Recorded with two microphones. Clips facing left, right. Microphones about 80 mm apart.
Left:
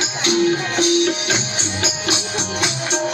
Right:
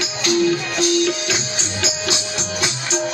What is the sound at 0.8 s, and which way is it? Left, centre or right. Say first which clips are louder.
Music: left 2 dB; left.